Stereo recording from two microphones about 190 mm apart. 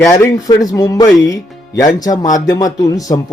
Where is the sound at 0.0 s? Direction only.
15° left (ahead or behind).